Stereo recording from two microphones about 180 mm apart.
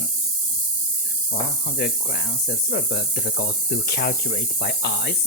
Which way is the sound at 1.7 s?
55° left (ahead or behind).